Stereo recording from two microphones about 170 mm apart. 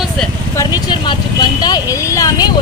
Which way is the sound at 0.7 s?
25° left (ahead or behind).